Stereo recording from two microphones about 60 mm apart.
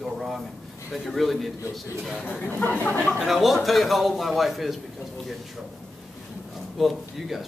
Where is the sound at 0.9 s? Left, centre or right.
Centre.